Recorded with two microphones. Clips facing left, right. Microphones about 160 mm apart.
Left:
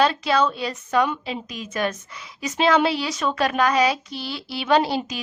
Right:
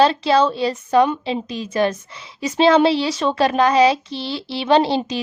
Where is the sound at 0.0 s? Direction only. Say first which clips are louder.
Right 5 dB; 30° right (ahead or behind).